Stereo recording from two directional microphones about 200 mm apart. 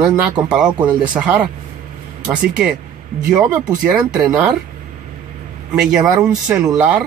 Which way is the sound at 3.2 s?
5° right (ahead or behind).